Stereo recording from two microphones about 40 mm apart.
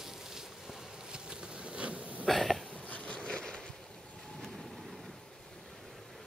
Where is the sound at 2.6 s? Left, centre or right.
Left.